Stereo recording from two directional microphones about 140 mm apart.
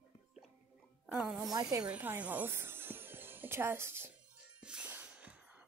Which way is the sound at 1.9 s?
10° right (ahead or behind).